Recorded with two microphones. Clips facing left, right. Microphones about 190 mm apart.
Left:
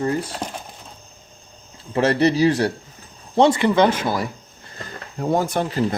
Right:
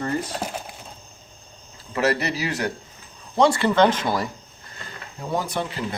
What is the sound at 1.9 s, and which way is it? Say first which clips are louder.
Speech: left 5 dB; 30° left (ahead or behind).